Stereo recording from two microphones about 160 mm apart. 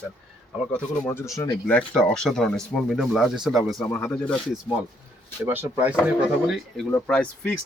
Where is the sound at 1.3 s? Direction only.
15° left (ahead or behind).